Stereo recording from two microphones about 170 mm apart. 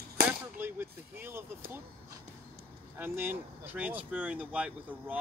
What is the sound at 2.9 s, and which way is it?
Speech, 15° right (ahead or behind).